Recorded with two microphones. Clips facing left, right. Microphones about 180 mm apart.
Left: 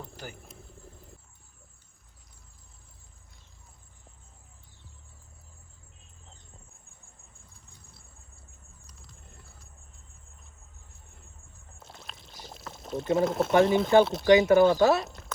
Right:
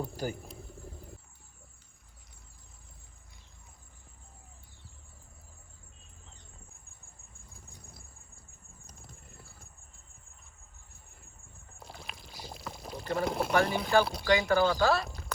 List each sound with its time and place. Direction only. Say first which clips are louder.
0.0 s a sound: right 8 dB; 40° right (ahead or behind)
0.4 s vehicle: right 4 dB; centre (ahead or behind)
11.8 s pour: right 2 dB; centre (ahead or behind)
13.2 s speech: left 5 dB; centre (ahead or behind)
13.5 s speech: left 7 dB; 20° left (ahead or behind)
14.0 s speech: left 8 dB; centre (ahead or behind)
14.3 s speech: left 7 dB; 20° left (ahead or behind)